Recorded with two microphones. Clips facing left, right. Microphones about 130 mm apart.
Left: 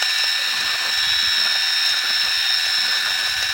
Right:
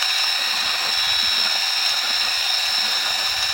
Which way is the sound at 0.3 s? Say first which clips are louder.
Right 1 dB; 30° right (ahead or behind).